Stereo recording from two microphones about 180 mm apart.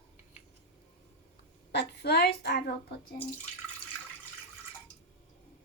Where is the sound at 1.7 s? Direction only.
65° left (ahead or behind).